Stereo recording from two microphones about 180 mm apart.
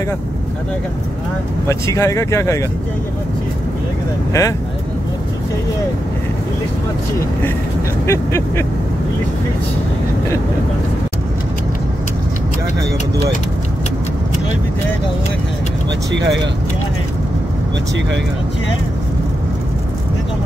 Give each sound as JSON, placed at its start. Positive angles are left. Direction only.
{"t": 1.7, "sound": "speech", "side_deg": 15}
{"t": 4.3, "sound": "speech", "side_deg": 15}
{"t": 8.1, "sound": "speech", "side_deg": 15}
{"t": 16.1, "sound": "speech", "side_deg": -75}